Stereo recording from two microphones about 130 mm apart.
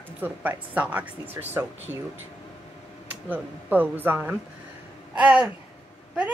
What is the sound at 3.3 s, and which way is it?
A woman's voice, 15° right (ahead or behind).